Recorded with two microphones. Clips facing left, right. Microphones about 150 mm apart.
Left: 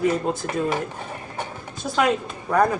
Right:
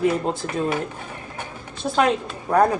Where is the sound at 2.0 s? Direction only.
30° right (ahead or behind).